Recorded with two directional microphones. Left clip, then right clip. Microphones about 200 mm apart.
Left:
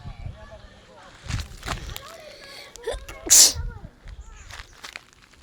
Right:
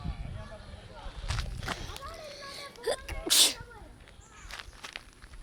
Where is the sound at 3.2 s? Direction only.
20° left (ahead or behind).